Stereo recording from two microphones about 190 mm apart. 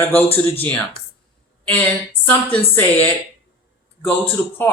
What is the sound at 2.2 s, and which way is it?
A man's voice, 10° left (ahead or behind).